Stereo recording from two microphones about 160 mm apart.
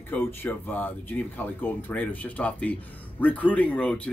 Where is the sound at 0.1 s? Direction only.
10° left (ahead or behind).